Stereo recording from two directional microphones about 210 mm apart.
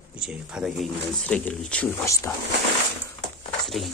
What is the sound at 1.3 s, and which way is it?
Speech, 5° left (ahead or behind).